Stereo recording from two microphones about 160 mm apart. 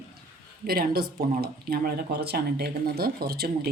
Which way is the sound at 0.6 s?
70° right (ahead or behind).